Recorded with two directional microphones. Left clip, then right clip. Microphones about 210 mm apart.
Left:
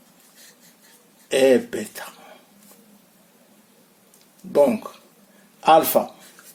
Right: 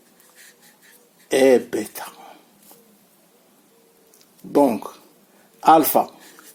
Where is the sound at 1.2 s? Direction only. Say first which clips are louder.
Right 1 dB; 35° right (ahead or behind).